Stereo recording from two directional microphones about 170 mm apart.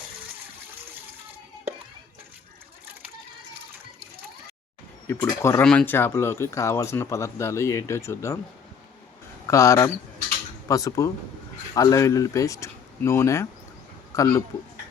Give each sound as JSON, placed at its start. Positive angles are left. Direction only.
{"t": 5.0, "sound": "speech", "side_deg": 20}
{"t": 9.5, "sound": "speech", "side_deg": 15}